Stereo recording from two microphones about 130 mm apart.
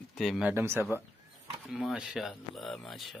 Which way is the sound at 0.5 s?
15° right (ahead or behind).